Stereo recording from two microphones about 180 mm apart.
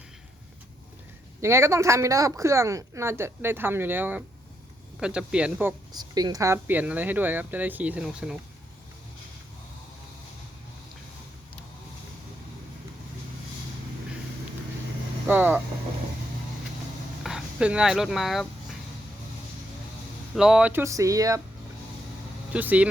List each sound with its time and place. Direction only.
1.4 s a woman's voice: 15° right (ahead or behind)
5.9 s a woman's voice: 20° right (ahead or behind); by 8.4 s 5° right (ahead or behind)
15.3 s a woman's voice: 10° right (ahead or behind)
17.2 s speech: 5° right (ahead or behind)
20.3 s a woman's voice: 5° right (ahead or behind); by 21.4 s 20° right (ahead or behind)
22.5 s a woman's voice: 10° right (ahead or behind)